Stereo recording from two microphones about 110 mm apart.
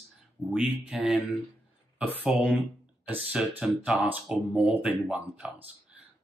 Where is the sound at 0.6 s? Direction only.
5° right (ahead or behind).